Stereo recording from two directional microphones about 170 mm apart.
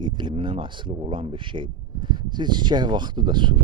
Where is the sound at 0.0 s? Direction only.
25° right (ahead or behind).